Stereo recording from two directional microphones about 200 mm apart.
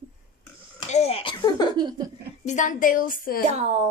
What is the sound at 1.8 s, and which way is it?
Speech, 20° right (ahead or behind).